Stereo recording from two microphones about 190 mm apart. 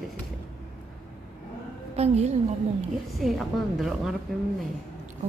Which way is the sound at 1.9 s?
35° right (ahead or behind).